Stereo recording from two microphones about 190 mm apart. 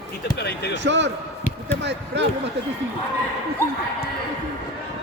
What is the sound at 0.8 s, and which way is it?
Speech, 70° right (ahead or behind).